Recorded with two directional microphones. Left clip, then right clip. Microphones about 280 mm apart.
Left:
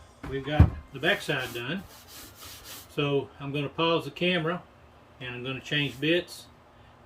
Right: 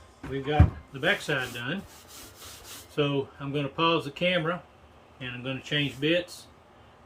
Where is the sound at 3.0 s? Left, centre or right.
Centre.